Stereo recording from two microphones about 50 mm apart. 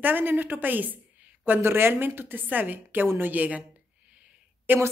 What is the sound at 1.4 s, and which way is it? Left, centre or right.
A woman's voice, right.